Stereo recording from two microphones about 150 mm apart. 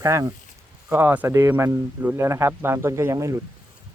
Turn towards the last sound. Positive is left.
turn(degrees=-20)  # may be behind; listen again after turning